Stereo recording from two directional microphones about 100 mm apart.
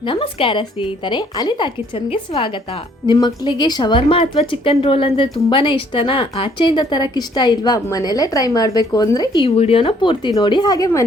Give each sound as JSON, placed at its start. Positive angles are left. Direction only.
{"t": 0.0, "sound": "a woman's voice", "side_deg": 60}
{"t": 9.4, "sound": "a woman's voice", "side_deg": 70}